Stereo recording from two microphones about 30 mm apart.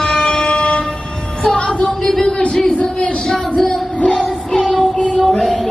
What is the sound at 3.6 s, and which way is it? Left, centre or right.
Music, centre.